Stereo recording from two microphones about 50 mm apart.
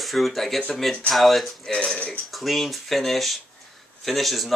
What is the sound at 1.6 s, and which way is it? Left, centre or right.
Speech, centre.